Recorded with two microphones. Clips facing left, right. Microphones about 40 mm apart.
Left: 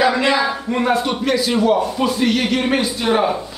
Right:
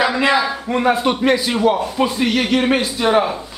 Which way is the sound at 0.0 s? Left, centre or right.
Centre.